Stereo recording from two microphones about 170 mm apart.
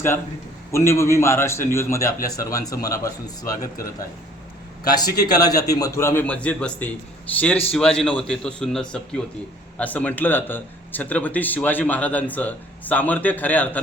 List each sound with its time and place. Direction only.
0.7 s speech: 15° left (ahead or behind)
4.9 s speech: 25° left (ahead or behind)